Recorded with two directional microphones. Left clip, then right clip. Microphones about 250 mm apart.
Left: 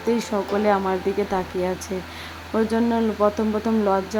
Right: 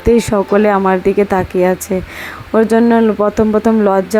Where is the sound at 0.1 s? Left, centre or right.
Right.